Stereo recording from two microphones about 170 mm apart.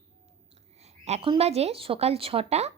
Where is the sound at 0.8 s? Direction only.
40° right (ahead or behind).